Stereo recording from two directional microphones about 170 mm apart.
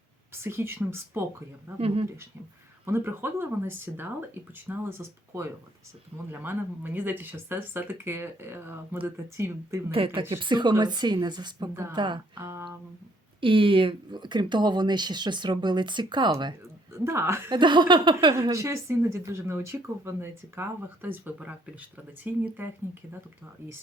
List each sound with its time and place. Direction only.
0.4 s a woman's voice: 15° right (ahead or behind)
1.8 s speech: 35° right (ahead or behind)
2.8 s a woman's voice: 15° right (ahead or behind)
10.2 s speech: 30° right (ahead or behind)
11.7 s a woman's voice: 15° right (ahead or behind)
11.9 s speech: 25° right (ahead or behind)
12.4 s a woman's voice: 15° right (ahead or behind)
13.4 s speech: 30° right (ahead or behind)
17.0 s a woman's voice: 15° right (ahead or behind)
17.5 s a woman's voice: 25° right (ahead or behind); by 22.7 s 10° right (ahead or behind)